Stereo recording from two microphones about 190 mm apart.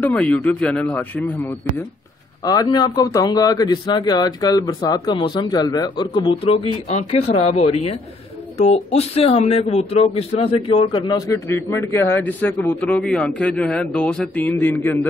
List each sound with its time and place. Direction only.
0.0 s speech: 5° left (ahead or behind)
2.4 s a man's voice: 20° left (ahead or behind)